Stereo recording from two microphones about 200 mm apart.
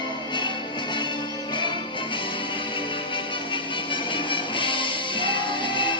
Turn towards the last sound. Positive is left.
turn(degrees=25)  # may be behind; listen again after turning